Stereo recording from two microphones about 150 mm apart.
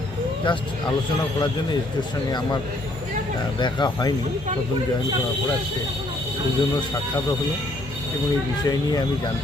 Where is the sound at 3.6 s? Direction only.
30° left (ahead or behind).